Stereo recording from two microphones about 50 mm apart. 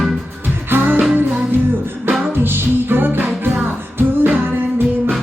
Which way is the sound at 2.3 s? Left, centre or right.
Right.